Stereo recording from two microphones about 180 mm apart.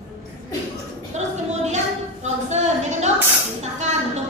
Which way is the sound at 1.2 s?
40° right (ahead or behind).